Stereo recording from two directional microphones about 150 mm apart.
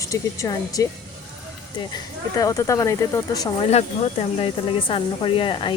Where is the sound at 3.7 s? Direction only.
45° left (ahead or behind).